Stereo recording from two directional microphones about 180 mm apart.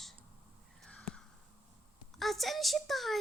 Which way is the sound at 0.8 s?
5° left (ahead or behind).